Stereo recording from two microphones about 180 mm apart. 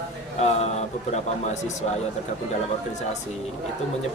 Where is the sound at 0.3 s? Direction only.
35° left (ahead or behind).